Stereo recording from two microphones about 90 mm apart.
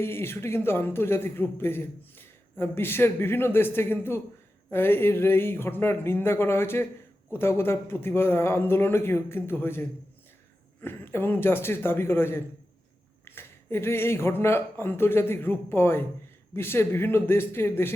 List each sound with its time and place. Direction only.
0.0 s a man's voice: 25° left (ahead or behind)
10.8 s a man's voice: 25° left (ahead or behind)